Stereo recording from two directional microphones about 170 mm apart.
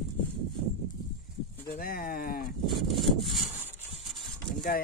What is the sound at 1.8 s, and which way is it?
Speech, 55° left (ahead or behind).